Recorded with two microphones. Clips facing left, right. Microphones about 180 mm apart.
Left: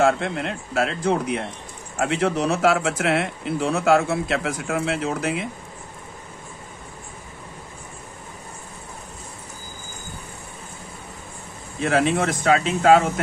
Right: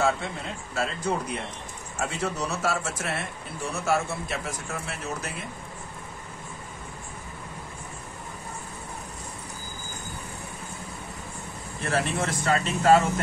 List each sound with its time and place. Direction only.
0.0 s speech: 75° left (ahead or behind)
11.8 s speech: 70° left (ahead or behind)